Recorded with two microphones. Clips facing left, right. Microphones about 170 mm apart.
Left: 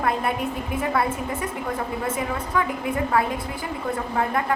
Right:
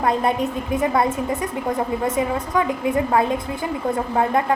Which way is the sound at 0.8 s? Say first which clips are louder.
Right 4 dB; 25° right (ahead or behind).